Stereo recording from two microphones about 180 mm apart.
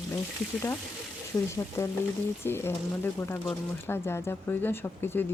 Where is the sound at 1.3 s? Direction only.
20° left (ahead or behind).